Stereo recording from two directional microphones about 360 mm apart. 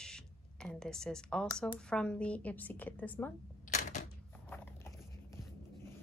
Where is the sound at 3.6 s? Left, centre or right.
Left.